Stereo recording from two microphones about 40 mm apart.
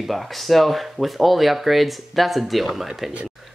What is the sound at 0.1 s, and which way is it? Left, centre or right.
Speech, centre.